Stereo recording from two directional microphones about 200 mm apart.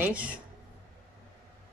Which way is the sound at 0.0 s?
5° right (ahead or behind).